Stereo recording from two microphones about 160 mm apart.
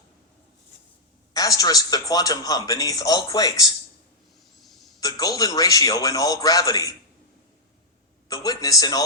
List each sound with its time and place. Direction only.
1.3 s speech: 20° left (ahead or behind)
4.5 s hiccup: centre (ahead or behind)
4.9 s speech: 20° left (ahead or behind)
8.3 s speech: 20° left (ahead or behind)